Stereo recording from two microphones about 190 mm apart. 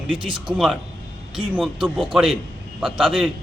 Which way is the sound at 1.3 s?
5° right (ahead or behind).